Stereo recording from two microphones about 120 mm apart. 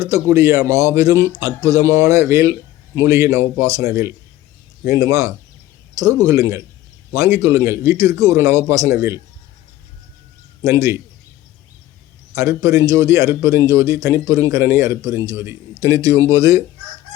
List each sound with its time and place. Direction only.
0.0 s speech: 25° right (ahead or behind)
10.6 s speech: 25° right (ahead or behind)
12.3 s speech: 25° right (ahead or behind)